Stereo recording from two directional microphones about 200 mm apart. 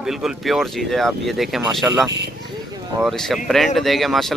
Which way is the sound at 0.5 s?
Centre (ahead or behind).